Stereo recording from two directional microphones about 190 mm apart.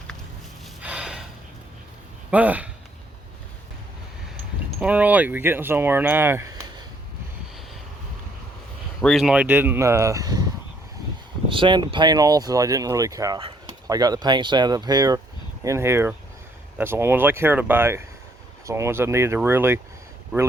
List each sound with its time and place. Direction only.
0.8 s gasp: 5° right (ahead or behind)
2.3 s speech: 10° right (ahead or behind)
4.8 s speech: 10° right (ahead or behind)
9.0 s speech: centre (ahead or behind)